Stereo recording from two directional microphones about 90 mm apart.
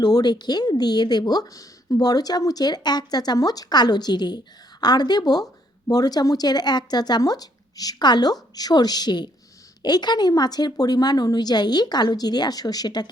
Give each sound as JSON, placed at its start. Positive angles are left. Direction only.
{"t": 0.0, "sound": "a woman's voice", "side_deg": 50}